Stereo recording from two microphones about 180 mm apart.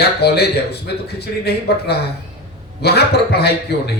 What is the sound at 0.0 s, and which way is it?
A man's voice, 65° left (ahead or behind).